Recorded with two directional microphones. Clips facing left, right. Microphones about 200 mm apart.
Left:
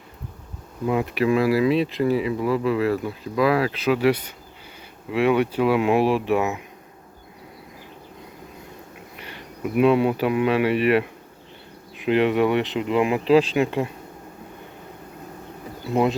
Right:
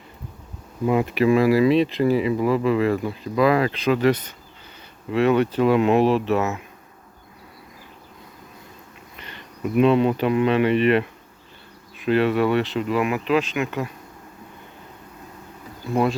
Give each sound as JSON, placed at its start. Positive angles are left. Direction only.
{"t": 0.9, "sound": "speech", "side_deg": 0}
{"t": 9.1, "sound": "speech", "side_deg": 10}
{"t": 15.9, "sound": "speech", "side_deg": 20}